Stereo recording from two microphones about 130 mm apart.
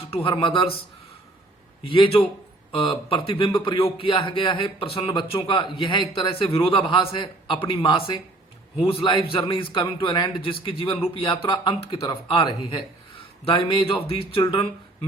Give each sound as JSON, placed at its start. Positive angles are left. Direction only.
{"t": 0.1, "sound": "speech", "side_deg": 45}
{"t": 1.8, "sound": "a man's voice", "side_deg": 40}